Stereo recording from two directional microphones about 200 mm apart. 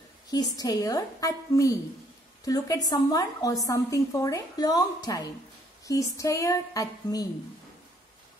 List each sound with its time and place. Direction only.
0.3 s a woman's voice: 20° left (ahead or behind)